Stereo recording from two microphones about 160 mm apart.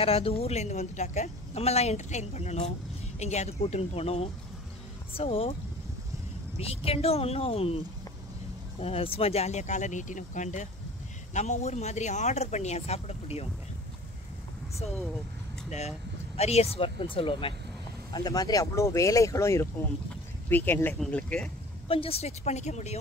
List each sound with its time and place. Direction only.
0.0 s a woman's voice: 35° left (ahead or behind)
16.3 s speech: 40° left (ahead or behind)
18.1 s speech: 25° left (ahead or behind); by 21.5 s 10° left (ahead or behind)
21.8 s a woman's voice: 35° left (ahead or behind)